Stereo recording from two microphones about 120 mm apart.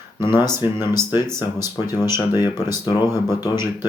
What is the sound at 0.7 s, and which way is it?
Speech, 20° right (ahead or behind).